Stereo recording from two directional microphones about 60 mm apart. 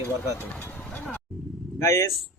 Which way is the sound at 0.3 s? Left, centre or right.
Left.